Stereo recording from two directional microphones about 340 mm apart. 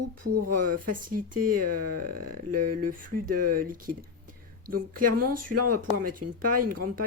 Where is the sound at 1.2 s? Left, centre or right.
Right.